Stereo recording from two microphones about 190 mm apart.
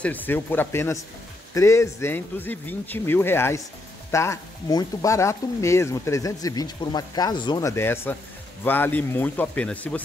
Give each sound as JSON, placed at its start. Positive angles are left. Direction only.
{"t": 0.0, "sound": "speech", "side_deg": 10}